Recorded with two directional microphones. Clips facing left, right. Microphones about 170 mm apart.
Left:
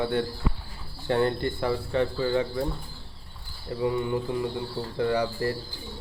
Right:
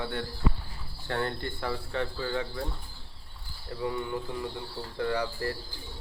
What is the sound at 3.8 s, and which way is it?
Speech, 10° left (ahead or behind).